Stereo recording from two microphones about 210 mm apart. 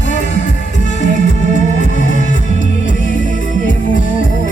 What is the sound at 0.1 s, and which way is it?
Music, 35° left (ahead or behind).